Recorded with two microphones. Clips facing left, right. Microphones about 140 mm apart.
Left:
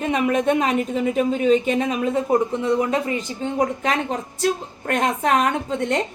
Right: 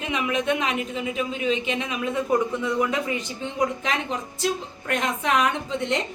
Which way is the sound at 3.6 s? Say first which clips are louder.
Left 3 dB; 50° left (ahead or behind).